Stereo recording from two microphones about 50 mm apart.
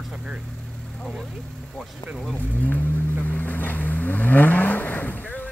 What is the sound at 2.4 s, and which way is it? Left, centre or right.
Speech, left.